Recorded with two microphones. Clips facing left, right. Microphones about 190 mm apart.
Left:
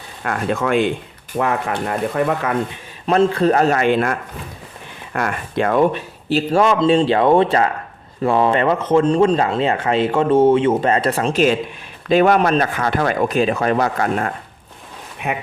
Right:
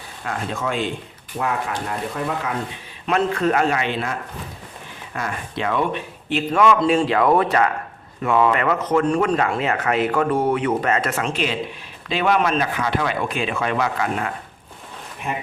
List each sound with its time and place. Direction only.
0.3 s speech: 60° left (ahead or behind)
3.1 s a man's voice: 30° left (ahead or behind)